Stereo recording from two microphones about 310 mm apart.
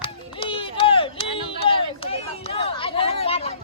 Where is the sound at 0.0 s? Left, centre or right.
Centre.